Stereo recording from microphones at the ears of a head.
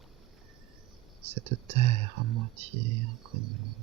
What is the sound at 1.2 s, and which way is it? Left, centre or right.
Speech, right.